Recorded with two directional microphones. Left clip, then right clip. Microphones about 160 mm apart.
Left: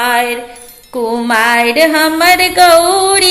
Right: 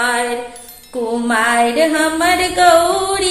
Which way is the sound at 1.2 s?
25° left (ahead or behind).